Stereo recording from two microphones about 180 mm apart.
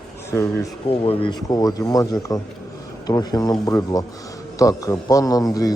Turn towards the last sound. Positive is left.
turn(degrees=20)  # may be behind; listen again after turning